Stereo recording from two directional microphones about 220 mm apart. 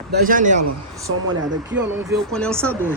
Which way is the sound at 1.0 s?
60° right (ahead or behind).